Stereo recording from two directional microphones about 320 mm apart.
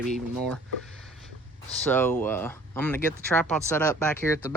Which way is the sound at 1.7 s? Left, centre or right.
Centre.